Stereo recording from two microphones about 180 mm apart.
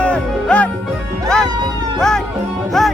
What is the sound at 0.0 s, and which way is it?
Music, 5° left (ahead or behind).